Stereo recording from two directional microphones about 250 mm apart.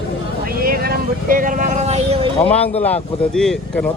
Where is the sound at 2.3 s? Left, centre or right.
Centre.